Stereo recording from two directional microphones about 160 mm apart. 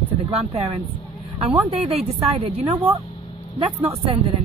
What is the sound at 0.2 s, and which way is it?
Speech, 40° right (ahead or behind).